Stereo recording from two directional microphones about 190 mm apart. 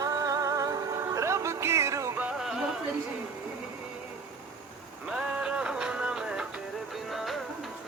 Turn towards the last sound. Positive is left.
turn(degrees=0)  # may be behind; listen again after turning